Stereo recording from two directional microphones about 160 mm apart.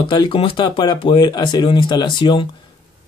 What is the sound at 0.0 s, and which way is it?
Speech, 30° left (ahead or behind).